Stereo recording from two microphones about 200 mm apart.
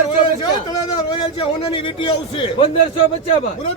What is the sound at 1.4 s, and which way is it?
A man's voice, 25° left (ahead or behind).